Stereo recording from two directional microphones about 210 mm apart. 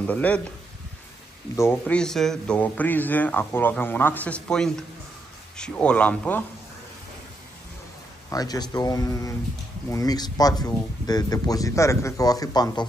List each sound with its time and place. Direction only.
0.0 s a man's voice: 5° left (ahead or behind)
1.6 s a man's voice: 10° left (ahead or behind)
8.3 s a man's voice: 15° left (ahead or behind)